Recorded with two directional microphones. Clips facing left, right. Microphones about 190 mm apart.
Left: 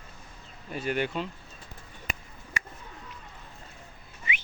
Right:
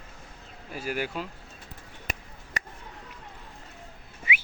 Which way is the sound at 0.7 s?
5° right (ahead or behind).